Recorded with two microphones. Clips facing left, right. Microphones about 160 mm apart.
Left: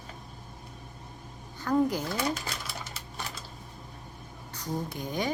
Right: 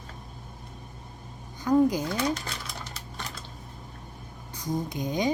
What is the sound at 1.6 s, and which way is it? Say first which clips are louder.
Speech: right 4 dB; 15° right (ahead or behind).